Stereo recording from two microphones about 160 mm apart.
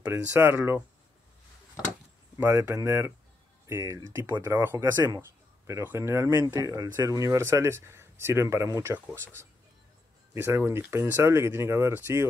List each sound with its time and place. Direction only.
0.1 s speech: 15° right (ahead or behind)
2.3 s speech: 20° right (ahead or behind)